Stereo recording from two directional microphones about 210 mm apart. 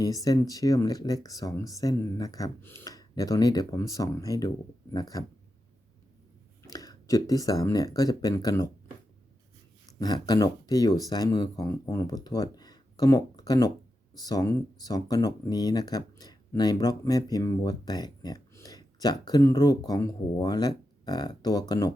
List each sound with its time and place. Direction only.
0.0 s speech: 15° left (ahead or behind)
6.7 s speech: 15° left (ahead or behind)
10.0 s speech: 20° left (ahead or behind)